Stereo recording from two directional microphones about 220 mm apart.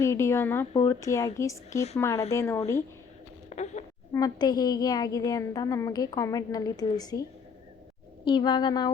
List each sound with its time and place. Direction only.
0.0 s a woman's voice: 15° left (ahead or behind)
3.5 s a sound: 30° left (ahead or behind)
4.1 s a woman's voice: 15° left (ahead or behind)